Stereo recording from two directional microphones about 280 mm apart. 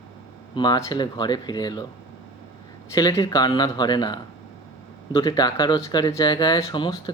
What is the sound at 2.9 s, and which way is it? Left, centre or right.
Speech, centre.